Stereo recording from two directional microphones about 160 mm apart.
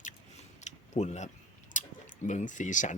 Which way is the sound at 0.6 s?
45° left (ahead or behind).